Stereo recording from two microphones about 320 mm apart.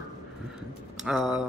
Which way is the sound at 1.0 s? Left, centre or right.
Centre.